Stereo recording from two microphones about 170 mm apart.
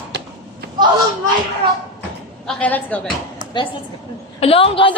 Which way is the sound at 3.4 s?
30° left (ahead or behind).